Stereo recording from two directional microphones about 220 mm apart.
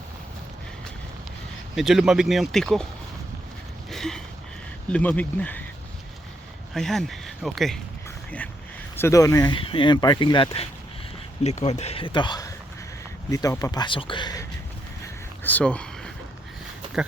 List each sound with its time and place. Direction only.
1.7 s speech: centre (ahead or behind)
3.8 s a sound: centre (ahead or behind)
4.9 s speech: 5° left (ahead or behind)
6.7 s speech: centre (ahead or behind)
9.0 s speech: 15° left (ahead or behind)
15.0 s a sound: 5° left (ahead or behind)